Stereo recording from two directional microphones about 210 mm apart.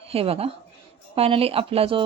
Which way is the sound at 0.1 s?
30° right (ahead or behind).